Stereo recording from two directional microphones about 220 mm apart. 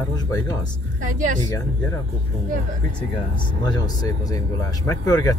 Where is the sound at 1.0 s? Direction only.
35° right (ahead or behind).